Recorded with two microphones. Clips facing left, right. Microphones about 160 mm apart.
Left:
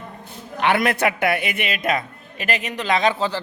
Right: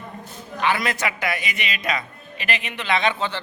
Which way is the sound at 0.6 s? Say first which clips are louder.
Left 4 dB; 60° left (ahead or behind).